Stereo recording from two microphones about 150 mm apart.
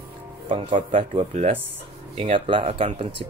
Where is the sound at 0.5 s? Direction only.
35° right (ahead or behind).